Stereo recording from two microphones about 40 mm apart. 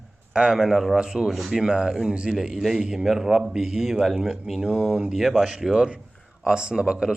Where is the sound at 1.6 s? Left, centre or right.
Centre.